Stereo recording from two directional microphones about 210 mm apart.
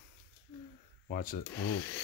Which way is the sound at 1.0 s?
45° left (ahead or behind).